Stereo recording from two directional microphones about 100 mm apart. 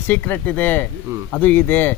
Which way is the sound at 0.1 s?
20° left (ahead or behind).